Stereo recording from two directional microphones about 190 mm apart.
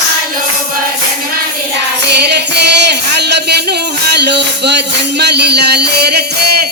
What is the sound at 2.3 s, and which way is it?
Music, 60° right (ahead or behind).